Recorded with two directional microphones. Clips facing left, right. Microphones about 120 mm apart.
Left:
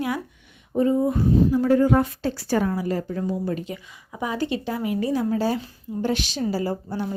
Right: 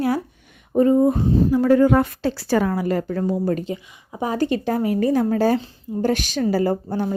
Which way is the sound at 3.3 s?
50° right (ahead or behind).